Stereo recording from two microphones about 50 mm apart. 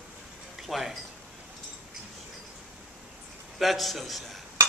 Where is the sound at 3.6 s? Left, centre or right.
Centre.